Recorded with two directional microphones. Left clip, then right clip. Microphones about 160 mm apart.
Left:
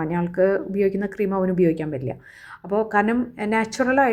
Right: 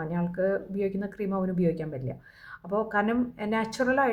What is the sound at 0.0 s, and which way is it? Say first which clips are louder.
A woman's voice: left 8 dB; 30° left (ahead or behind).